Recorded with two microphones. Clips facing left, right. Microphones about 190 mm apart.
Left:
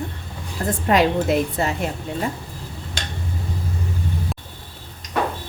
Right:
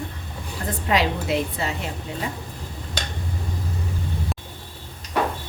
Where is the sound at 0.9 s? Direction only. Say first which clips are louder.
Left 5 dB; 50° left (ahead or behind).